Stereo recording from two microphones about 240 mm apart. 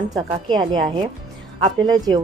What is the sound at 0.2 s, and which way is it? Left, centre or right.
A woman's voice, centre.